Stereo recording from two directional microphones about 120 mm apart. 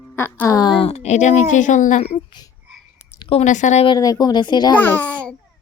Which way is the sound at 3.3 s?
75° left (ahead or behind).